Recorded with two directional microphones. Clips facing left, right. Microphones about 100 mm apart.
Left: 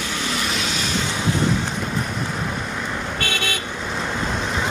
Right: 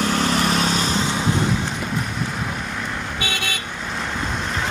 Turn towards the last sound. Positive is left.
turn(degrees=5)  # may be behind; listen again after turning